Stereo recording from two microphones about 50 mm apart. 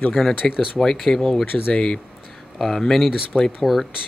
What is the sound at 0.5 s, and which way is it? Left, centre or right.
Speech, centre.